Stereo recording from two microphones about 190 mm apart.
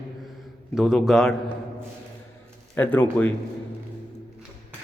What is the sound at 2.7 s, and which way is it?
Speech, 10° left (ahead or behind).